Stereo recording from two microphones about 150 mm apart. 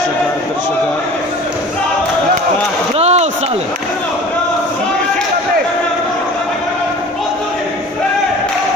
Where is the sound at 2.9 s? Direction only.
45° right (ahead or behind).